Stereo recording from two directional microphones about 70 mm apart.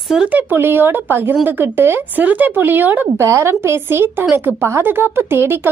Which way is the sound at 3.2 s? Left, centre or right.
Right.